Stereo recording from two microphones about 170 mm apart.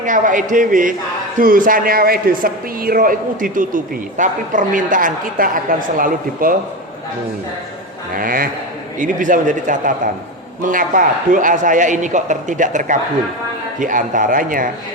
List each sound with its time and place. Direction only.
0.0 s speech: 50° right (ahead or behind)
8.1 s speech: 55° right (ahead or behind)